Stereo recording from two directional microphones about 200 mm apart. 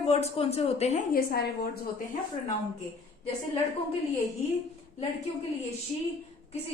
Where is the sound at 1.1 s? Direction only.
50° left (ahead or behind).